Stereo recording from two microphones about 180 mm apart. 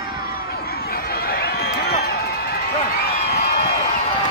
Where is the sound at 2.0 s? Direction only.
60° left (ahead or behind).